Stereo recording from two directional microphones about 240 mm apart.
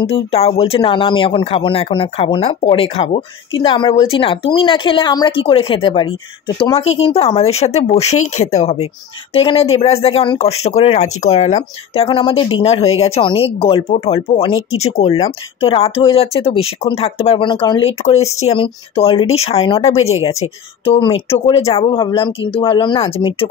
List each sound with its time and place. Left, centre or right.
0.0 s speech: left
14.7 s speech: left
15.0 s speech: left